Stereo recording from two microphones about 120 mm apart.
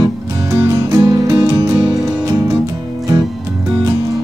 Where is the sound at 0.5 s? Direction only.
25° right (ahead or behind).